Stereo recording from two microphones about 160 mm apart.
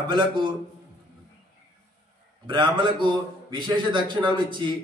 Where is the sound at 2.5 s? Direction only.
30° right (ahead or behind).